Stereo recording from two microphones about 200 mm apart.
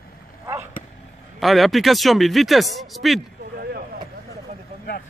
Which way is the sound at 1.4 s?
Centre (ahead or behind).